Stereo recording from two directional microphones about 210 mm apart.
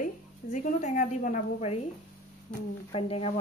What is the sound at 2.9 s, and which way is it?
Speech, 25° left (ahead or behind).